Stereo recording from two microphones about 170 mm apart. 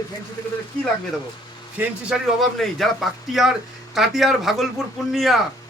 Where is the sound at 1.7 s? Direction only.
Centre (ahead or behind).